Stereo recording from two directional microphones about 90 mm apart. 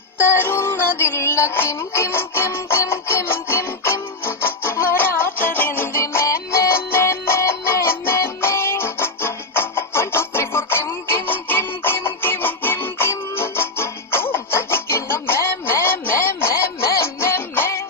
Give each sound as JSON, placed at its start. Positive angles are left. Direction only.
{"t": 0.2, "sound": "music", "side_deg": 25}